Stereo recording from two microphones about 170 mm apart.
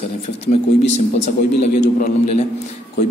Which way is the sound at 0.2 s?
35° left (ahead or behind).